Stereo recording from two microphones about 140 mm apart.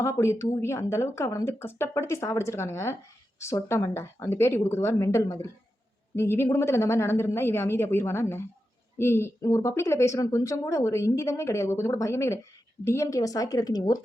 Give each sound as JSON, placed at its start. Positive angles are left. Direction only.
{"t": 0.0, "sound": "speech", "side_deg": 20}